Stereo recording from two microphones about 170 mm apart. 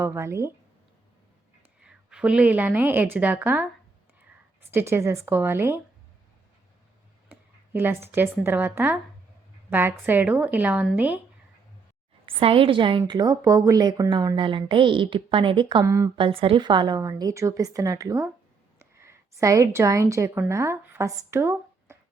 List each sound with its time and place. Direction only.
0.0 s a woman's voice: 15° right (ahead or behind)
1.8 s a woman's voice: 5° right (ahead or behind)
4.7 s a woman's voice: 15° right (ahead or behind)
7.3 s a woman's voice: 10° right (ahead or behind)
12.2 s a woman's voice: 30° right (ahead or behind)
15.8 s a woman's voice: 20° right (ahead or behind)
16.1 s a woman's voice: 30° right (ahead or behind); by 21.9 s 15° right (ahead or behind)